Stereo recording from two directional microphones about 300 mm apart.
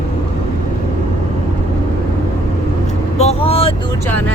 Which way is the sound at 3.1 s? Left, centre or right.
Left.